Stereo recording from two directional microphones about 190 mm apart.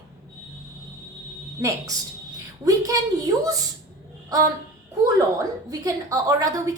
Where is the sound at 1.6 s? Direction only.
15° right (ahead or behind).